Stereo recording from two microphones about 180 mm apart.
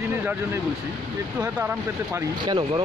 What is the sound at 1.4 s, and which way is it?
Speech, 10° right (ahead or behind).